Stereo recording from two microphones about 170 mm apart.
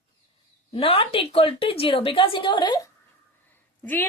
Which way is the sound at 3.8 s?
10° left (ahead or behind).